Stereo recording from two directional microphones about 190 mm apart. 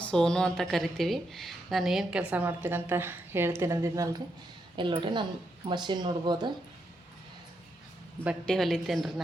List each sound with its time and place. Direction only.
0.0 s a woman's voice: 5° left (ahead or behind); by 6.5 s 25° right (ahead or behind)
8.4 s a woman's voice: centre (ahead or behind)